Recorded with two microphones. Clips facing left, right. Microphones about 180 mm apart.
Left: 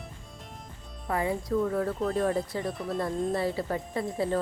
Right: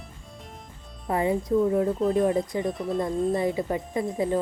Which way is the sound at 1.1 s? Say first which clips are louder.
Right 4 dB; 20° right (ahead or behind).